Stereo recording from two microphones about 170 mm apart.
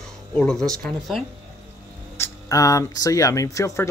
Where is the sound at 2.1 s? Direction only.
15° left (ahead or behind).